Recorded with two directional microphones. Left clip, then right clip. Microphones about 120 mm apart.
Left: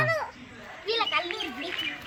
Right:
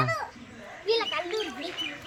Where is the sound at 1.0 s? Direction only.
45° left (ahead or behind).